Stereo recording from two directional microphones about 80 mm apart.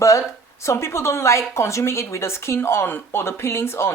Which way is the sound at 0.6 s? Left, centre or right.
Left.